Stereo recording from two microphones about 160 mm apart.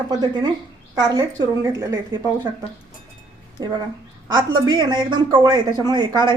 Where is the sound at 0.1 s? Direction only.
25° right (ahead or behind).